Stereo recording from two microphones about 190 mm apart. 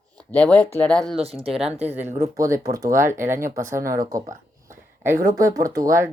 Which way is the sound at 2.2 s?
15° right (ahead or behind).